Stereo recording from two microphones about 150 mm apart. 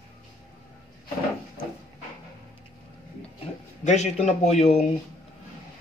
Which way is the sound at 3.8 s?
50° left (ahead or behind).